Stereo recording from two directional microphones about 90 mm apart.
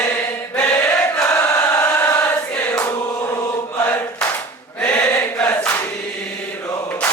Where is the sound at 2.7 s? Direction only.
30° left (ahead or behind).